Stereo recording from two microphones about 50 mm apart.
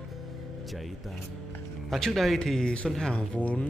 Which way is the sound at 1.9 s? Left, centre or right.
Centre.